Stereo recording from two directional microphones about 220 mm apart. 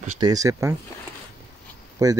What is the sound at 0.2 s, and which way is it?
Speech, 15° right (ahead or behind).